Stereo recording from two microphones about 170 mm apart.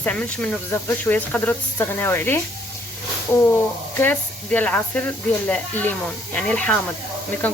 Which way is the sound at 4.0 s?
10° left (ahead or behind).